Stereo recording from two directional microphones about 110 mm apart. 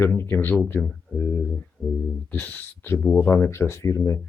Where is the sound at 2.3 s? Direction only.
15° left (ahead or behind).